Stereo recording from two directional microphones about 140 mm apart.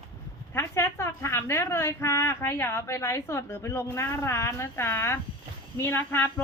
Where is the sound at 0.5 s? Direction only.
20° left (ahead or behind).